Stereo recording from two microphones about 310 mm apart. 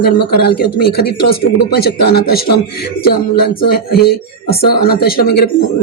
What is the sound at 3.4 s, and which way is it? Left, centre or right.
Speech, left.